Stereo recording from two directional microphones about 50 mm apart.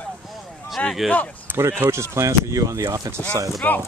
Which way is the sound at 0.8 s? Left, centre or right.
Left.